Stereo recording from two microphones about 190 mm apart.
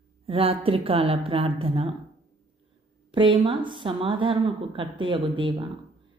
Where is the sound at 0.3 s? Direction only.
30° right (ahead or behind).